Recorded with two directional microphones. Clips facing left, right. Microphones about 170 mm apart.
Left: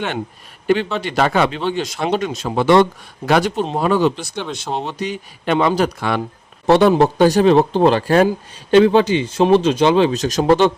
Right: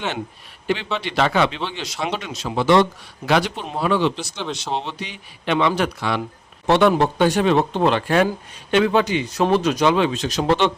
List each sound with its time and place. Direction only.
0.9 s speech: 45° left (ahead or behind)
6.0 s speech: 50° left (ahead or behind)
6.7 s a man's voice: 35° left (ahead or behind)